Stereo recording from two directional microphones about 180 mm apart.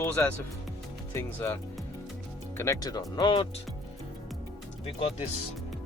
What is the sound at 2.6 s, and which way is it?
Speech, 20° left (ahead or behind).